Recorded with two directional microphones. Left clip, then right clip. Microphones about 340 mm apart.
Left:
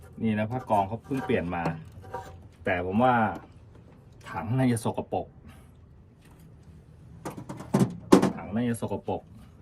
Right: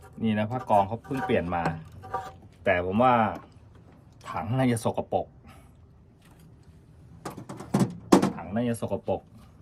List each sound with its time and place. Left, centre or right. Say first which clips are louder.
0.2 s speech: right 1 dB; right
0.6 s speech: right 3 dB; centre
1.3 s speech: right 2 dB; centre
1.6 s a sound: right 2 dB; centre
2.9 s speech: right 1 dB; centre
4.3 s speech: right 1 dB; centre
4.8 s speech: right 3 dB; centre
7.2 s a sound: even; centre
8.5 s speech: right 2 dB; centre